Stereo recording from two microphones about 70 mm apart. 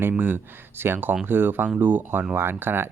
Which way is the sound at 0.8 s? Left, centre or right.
Right.